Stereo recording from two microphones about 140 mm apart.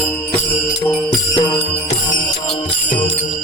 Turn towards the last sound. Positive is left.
turn(degrees=35)  # may be behind; listen again after turning